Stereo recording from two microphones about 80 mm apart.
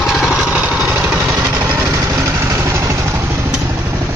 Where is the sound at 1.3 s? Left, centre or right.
Right.